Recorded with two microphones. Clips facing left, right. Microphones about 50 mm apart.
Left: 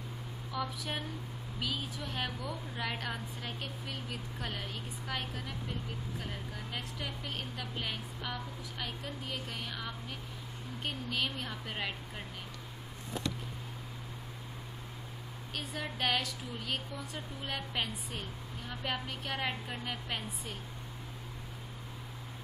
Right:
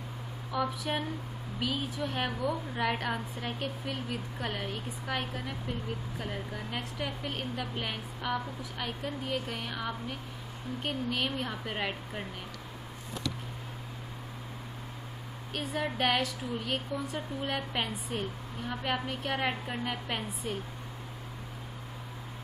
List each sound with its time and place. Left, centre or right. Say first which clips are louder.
0.5 s a woman's voice: right 6 dB; right
15.5 s a woman's voice: right 7 dB; centre